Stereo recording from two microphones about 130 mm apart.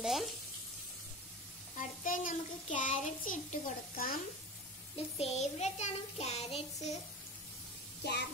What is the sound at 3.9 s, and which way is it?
Speech, 90° left.